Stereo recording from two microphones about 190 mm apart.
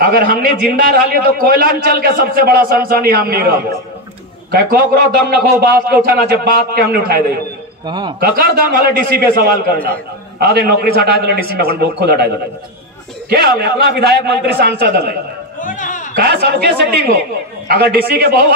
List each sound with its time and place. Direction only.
0.0 s a man's voice: 50° right (ahead or behind)
4.5 s a man's voice: 50° right (ahead or behind)
7.8 s a man's voice: 25° right (ahead or behind)
8.2 s a man's voice: 50° right (ahead or behind)
13.3 s a man's voice: 55° right (ahead or behind)
15.6 s a sound: 45° left (ahead or behind)
16.2 s a man's voice: 50° right (ahead or behind)